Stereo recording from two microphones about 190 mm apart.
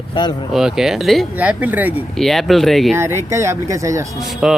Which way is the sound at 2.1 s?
Centre (ahead or behind).